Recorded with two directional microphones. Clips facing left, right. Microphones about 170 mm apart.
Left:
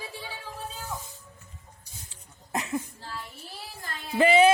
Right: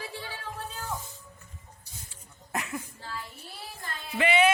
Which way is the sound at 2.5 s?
25° left (ahead or behind).